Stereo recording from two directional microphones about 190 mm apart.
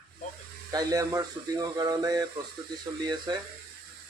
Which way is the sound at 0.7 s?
20° right (ahead or behind).